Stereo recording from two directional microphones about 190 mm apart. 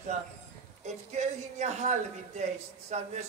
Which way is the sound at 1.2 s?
35° right (ahead or behind).